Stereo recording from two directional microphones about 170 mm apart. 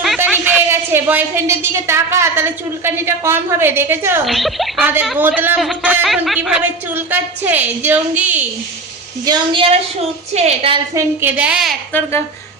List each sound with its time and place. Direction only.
0.2 s a woman's voice: 10° right (ahead or behind)
4.3 s a man's voice: centre (ahead or behind)
9.2 s a woman's voice: 25° right (ahead or behind)
10.9 s a woman's voice: 15° right (ahead or behind)